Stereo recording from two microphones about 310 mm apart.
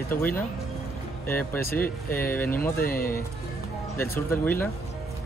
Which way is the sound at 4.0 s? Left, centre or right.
Centre.